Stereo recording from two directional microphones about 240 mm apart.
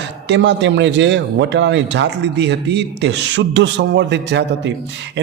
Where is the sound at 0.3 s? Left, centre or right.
Right.